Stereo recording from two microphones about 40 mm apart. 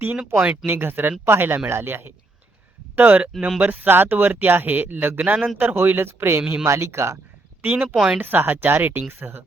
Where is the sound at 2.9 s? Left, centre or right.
Right.